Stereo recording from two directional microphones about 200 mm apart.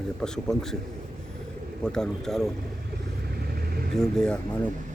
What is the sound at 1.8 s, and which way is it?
Speech, 5° left (ahead or behind).